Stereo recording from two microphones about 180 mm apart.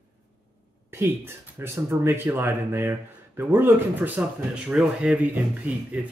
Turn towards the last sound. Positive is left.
turn(degrees=-10)  # may be behind; listen again after turning